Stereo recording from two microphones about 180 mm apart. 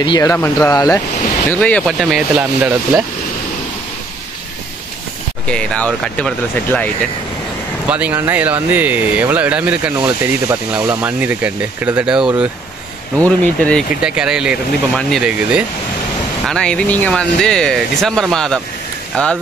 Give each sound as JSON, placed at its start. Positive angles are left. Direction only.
{"t": 0.0, "sound": "speech", "side_deg": 20}
{"t": 1.5, "sound": "speech", "side_deg": 5}
{"t": 5.5, "sound": "speech", "side_deg": 5}
{"t": 7.9, "sound": "speech", "side_deg": -10}
{"t": 13.2, "sound": "speech", "side_deg": 5}
{"t": 14.0, "sound": "speech", "side_deg": -5}